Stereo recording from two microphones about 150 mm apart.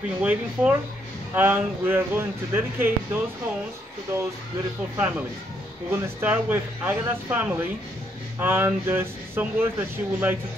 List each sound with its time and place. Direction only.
0.2 s speech: 10° right (ahead or behind)
5.9 s speech: 15° right (ahead or behind)